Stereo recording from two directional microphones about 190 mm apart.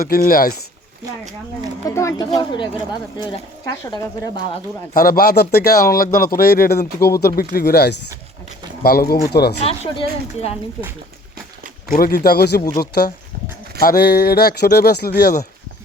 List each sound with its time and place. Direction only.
0.0 s speech: 50° left (ahead or behind)
2.0 s speech: 15° left (ahead or behind)
4.9 s speech: 50° left (ahead or behind)
9.6 s a woman's voice: 30° left (ahead or behind)
11.9 s speech: 50° left (ahead or behind)